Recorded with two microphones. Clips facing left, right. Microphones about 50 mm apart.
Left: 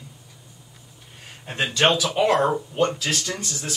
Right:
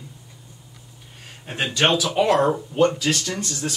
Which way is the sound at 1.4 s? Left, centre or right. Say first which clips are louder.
Even; centre.